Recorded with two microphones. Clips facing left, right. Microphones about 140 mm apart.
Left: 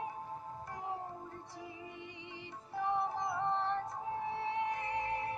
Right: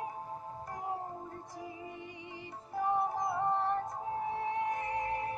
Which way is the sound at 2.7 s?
45° right (ahead or behind).